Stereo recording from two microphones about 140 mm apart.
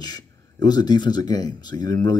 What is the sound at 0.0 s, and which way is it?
Speech, 30° left (ahead or behind).